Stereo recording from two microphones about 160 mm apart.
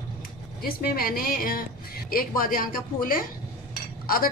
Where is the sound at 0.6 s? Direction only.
70° left (ahead or behind).